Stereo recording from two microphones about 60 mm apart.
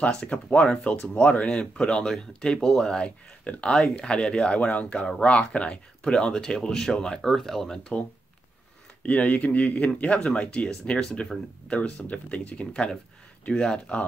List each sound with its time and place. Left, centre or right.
0.0 s speech: left
9.0 s speech: left